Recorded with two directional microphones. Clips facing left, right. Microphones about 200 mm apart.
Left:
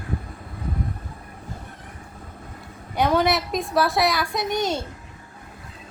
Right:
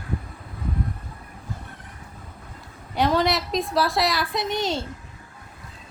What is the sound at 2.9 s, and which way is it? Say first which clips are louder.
A woman's voice: left 1 dB; centre (ahead or behind).